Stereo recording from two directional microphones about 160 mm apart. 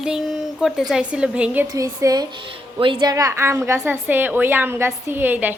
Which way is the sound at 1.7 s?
20° right (ahead or behind).